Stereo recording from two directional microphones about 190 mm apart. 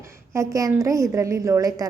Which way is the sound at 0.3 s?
15° right (ahead or behind).